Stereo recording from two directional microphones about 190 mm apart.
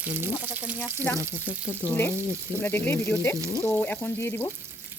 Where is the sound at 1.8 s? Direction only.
10° left (ahead or behind).